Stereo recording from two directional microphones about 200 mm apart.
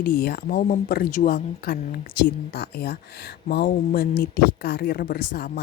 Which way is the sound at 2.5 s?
55° left (ahead or behind).